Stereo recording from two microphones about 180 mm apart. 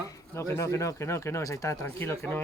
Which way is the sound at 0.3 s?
15° left (ahead or behind).